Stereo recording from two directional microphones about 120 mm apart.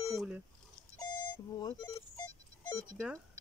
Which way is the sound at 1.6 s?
35° left (ahead or behind).